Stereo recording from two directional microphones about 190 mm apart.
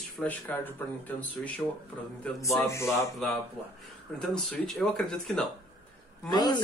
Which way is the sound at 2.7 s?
15° left (ahead or behind).